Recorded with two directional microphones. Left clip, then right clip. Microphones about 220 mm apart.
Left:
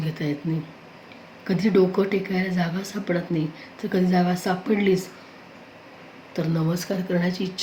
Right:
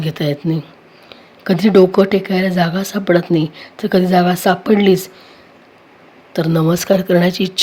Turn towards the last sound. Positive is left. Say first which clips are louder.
# right 12 dB
turn(degrees=-45)  # may be behind; listen again after turning